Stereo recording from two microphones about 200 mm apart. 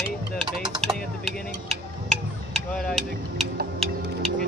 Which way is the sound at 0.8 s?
Centre (ahead or behind).